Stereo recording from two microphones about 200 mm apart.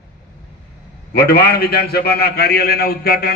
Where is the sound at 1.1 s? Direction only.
50° left (ahead or behind).